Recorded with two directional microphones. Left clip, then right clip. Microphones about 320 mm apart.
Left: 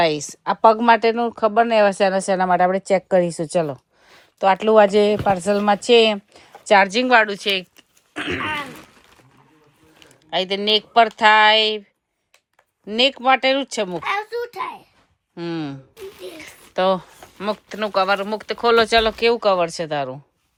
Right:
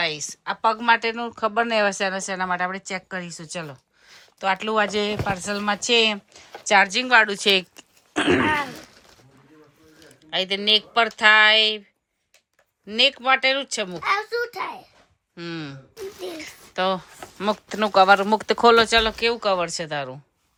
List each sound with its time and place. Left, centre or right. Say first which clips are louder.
0.0 s speech: left 7 dB; centre
7.3 s speech: right 2 dB; centre
8.1 s throat clearing: right 5 dB; centre
10.1 s speech: left 2 dB; centre
12.8 s speech: left 2 dB; centre
15.4 s speech: left 6 dB; centre